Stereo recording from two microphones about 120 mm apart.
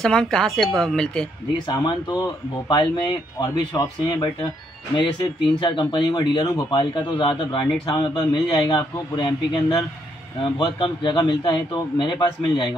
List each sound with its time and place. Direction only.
0.0 s speech: 5° left (ahead or behind)
1.7 s a man's voice: 35° left (ahead or behind)